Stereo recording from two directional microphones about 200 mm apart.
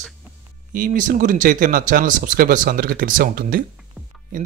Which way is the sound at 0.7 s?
40° right (ahead or behind).